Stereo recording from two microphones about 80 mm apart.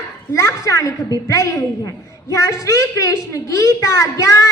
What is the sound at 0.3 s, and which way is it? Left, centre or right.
A woman's voice, left.